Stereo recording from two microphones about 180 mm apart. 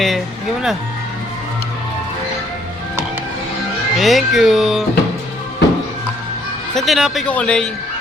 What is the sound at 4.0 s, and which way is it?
Speech, centre (ahead or behind).